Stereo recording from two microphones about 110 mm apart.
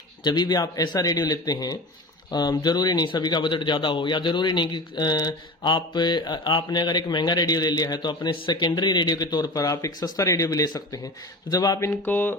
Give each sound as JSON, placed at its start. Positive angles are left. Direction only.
{"t": 0.3, "sound": "speech", "side_deg": 40}
{"t": 11.9, "sound": "speech", "side_deg": 15}